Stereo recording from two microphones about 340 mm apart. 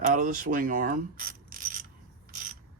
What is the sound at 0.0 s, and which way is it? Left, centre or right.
Mechanisms, right.